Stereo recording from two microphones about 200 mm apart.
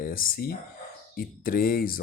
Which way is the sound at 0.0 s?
45° left (ahead or behind).